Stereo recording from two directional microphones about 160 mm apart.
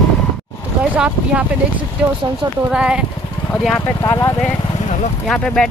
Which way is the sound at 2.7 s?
5° right (ahead or behind).